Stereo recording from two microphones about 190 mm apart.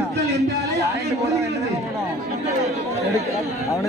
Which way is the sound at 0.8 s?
15° right (ahead or behind).